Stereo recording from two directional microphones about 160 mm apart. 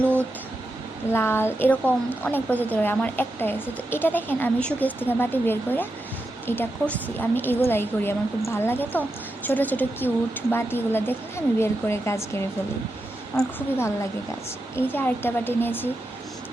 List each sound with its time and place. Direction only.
1.1 s speech: 15° left (ahead or behind)
13.3 s a woman's voice: 5° left (ahead or behind)
13.7 s speech: 15° left (ahead or behind)